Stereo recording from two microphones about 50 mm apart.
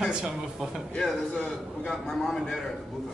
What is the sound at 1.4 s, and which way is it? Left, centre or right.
A man's voice, centre.